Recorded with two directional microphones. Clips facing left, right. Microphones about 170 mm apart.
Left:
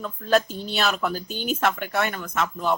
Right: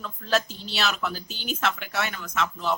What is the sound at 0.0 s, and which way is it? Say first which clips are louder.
Speech: left 5 dB; 50° left (ahead or behind).